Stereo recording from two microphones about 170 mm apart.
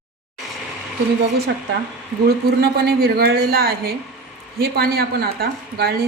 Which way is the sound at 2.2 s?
70° right (ahead or behind).